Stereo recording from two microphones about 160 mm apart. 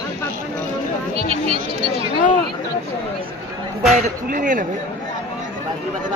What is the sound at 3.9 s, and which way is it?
Speech, 55° right (ahead or behind).